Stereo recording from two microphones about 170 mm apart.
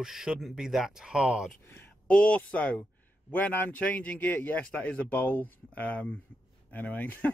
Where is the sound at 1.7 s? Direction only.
10° left (ahead or behind).